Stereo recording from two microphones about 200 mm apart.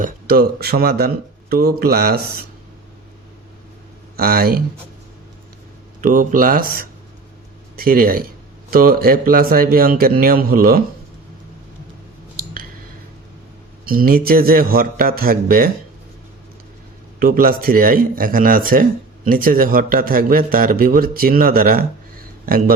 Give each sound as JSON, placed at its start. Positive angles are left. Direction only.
{"t": 0.0, "sound": "a man's voice", "side_deg": -50}
{"t": 4.2, "sound": "a man's voice", "side_deg": -50}
{"t": 6.0, "sound": "a man's voice", "side_deg": -40}
{"t": 13.8, "sound": "a man's voice", "side_deg": -45}
{"t": 17.2, "sound": "a man's voice", "side_deg": -45}